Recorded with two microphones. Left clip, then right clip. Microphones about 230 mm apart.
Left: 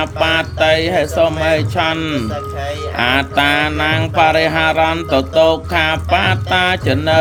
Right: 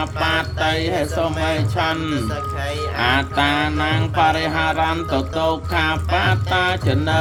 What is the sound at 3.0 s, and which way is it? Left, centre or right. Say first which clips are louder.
Speech: left 4 dB; left.